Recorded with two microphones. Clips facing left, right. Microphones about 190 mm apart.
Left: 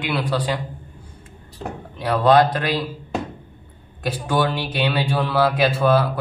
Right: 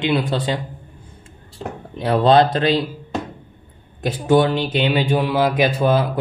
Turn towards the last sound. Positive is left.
turn(degrees=-20)  # may be behind; listen again after turning